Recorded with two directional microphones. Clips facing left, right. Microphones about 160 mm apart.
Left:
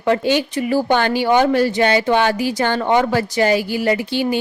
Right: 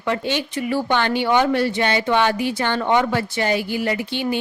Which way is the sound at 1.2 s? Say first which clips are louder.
Left 3 dB; 40° left (ahead or behind).